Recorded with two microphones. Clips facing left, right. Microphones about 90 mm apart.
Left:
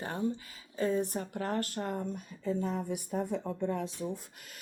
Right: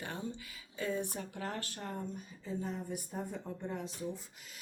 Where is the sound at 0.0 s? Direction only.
35° left (ahead or behind).